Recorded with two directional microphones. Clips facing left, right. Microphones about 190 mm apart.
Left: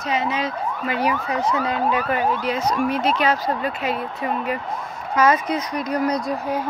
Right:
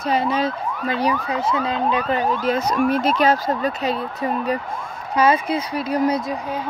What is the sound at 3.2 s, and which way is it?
Speech, 45° right (ahead or behind).